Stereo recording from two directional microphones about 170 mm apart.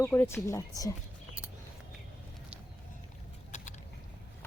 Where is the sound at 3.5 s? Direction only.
45° left (ahead or behind).